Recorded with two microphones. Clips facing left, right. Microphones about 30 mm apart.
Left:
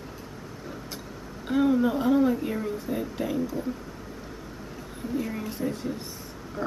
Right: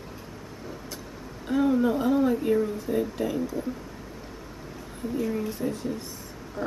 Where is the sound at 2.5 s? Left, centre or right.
Centre.